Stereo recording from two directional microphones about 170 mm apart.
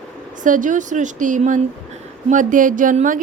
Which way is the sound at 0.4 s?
50° right (ahead or behind).